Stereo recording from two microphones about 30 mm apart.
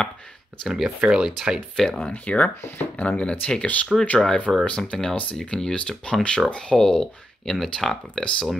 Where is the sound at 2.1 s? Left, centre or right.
Left.